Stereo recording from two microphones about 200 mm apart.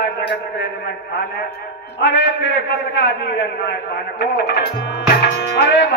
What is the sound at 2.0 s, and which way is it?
Speech, 60° left (ahead or behind).